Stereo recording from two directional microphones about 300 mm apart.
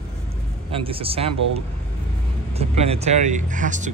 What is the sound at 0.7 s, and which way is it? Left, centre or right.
A man's voice, centre.